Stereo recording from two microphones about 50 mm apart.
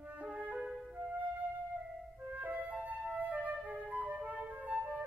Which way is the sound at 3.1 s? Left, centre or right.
Right.